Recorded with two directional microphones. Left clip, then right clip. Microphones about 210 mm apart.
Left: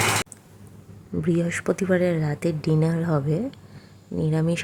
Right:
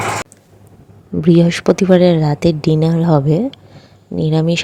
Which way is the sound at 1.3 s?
25° right (ahead or behind).